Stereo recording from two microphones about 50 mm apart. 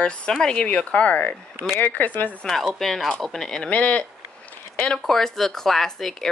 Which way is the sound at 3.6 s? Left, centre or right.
Left.